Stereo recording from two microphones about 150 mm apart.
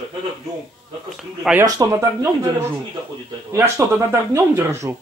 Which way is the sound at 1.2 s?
5° right (ahead or behind).